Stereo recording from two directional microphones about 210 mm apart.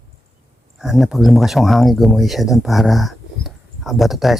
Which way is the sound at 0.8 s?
Centre (ahead or behind).